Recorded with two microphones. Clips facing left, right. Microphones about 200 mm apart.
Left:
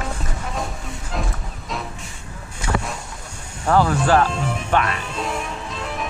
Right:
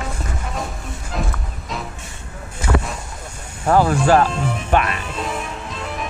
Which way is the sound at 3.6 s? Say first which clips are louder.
Right 2 dB; 25° right (ahead or behind).